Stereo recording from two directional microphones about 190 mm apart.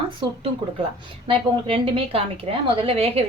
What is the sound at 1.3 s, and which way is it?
A woman's voice, 25° right (ahead or behind).